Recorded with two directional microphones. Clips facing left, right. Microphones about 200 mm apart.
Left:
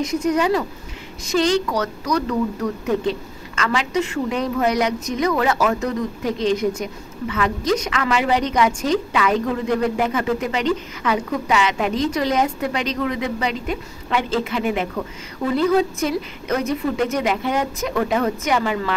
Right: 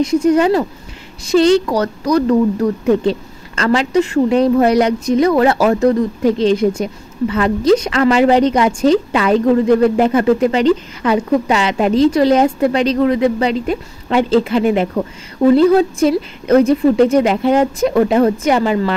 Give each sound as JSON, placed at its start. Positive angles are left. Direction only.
{"t": 0.0, "sound": "speech", "side_deg": -30}